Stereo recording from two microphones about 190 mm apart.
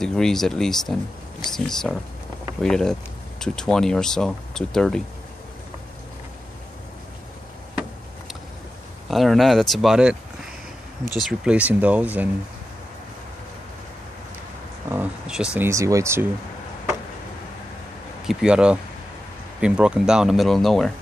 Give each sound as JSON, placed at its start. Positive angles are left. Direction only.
{"t": 0.0, "sound": "speech", "side_deg": 0}
{"t": 9.1, "sound": "speech", "side_deg": 0}
{"t": 11.2, "sound": "speech", "side_deg": -5}
{"t": 14.9, "sound": "speech", "side_deg": -5}
{"t": 18.2, "sound": "speech", "side_deg": -5}